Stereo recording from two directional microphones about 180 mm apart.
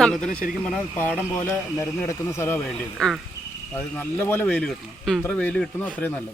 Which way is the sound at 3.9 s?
10° left (ahead or behind).